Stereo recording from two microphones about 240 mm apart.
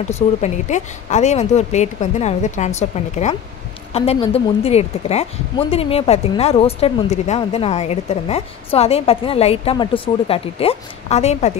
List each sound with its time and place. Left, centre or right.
0.0 s speech: left